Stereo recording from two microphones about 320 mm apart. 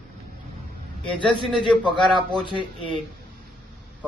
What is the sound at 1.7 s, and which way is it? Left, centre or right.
Speech, centre.